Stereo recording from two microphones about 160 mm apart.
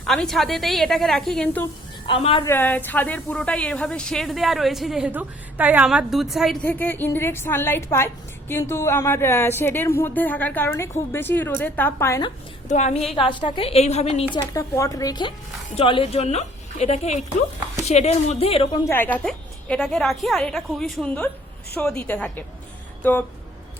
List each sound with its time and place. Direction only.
0.0 s a woman's voice: 5° left (ahead or behind)
2.0 s a woman's voice: 35° left (ahead or behind)
2.4 s a woman's voice: 15° left (ahead or behind)
6.7 s a woman's voice: 10° left (ahead or behind)
12.6 s a woman's voice: 45° left (ahead or behind)
14.3 s a woman's voice: 20° left (ahead or behind); by 18.8 s 35° left (ahead or behind)
18.9 s a woman's voice: 10° left (ahead or behind)